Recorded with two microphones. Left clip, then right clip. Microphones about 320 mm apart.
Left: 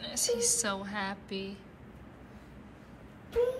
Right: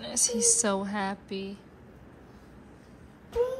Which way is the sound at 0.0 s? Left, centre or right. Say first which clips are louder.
Right 3 dB; right.